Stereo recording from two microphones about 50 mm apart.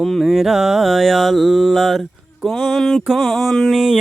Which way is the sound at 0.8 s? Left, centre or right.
Centre.